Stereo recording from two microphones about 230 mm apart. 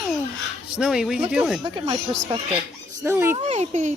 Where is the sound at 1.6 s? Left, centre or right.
Right.